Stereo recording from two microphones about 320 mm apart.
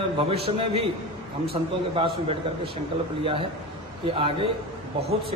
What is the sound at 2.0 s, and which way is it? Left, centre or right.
Speech, centre.